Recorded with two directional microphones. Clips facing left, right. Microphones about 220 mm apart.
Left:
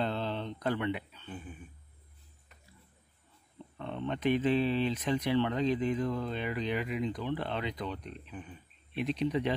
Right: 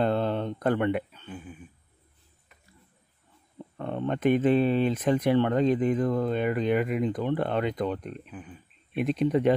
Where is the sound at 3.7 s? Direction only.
50° right (ahead or behind).